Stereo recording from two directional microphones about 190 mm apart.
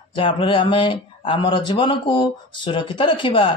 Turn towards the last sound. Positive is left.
turn(degrees=25)  # may be behind; listen again after turning